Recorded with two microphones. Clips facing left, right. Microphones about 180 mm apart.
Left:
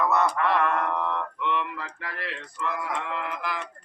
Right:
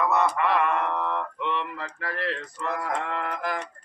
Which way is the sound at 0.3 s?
5° right (ahead or behind).